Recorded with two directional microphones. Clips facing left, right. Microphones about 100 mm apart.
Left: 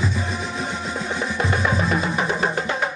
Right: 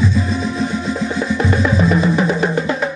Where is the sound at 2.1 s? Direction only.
30° left (ahead or behind).